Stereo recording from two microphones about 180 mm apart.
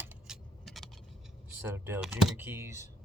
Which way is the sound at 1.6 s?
10° right (ahead or behind).